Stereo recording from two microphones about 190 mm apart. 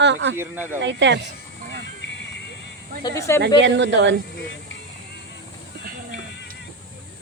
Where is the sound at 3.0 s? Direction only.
15° left (ahead or behind).